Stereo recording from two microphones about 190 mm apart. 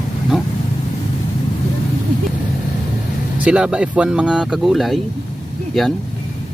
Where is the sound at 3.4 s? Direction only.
5° right (ahead or behind).